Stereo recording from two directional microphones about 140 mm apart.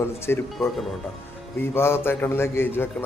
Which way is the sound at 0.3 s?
15° left (ahead or behind).